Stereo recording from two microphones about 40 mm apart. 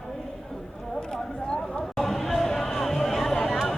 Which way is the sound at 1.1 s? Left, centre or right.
Left.